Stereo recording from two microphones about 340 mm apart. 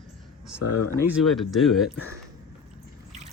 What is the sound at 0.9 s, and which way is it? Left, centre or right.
Speech, centre.